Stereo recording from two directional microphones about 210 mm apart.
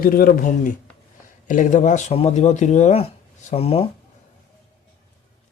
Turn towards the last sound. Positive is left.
turn(degrees=25)  # may be behind; listen again after turning